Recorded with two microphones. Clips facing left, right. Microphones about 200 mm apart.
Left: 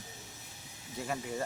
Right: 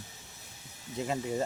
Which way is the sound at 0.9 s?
20° right (ahead or behind).